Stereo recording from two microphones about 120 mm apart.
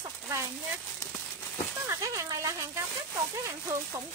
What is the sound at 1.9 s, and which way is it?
Speech, 25° right (ahead or behind).